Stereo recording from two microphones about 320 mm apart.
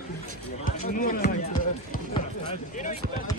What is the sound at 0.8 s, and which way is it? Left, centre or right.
Speech, left.